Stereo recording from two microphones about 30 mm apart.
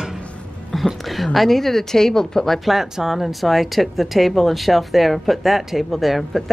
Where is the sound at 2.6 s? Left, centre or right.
Centre.